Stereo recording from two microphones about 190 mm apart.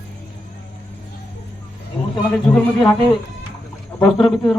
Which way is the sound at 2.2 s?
5° left (ahead or behind).